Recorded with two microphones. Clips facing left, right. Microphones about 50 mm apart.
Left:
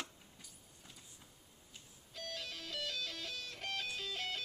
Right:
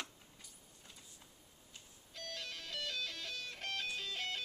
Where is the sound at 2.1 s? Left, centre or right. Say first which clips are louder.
Left 1 dB; centre.